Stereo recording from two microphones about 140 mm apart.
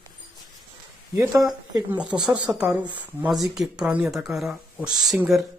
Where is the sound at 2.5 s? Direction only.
10° right (ahead or behind).